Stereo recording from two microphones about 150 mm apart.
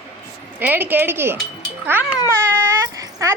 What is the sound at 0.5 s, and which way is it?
Speech, 10° right (ahead or behind).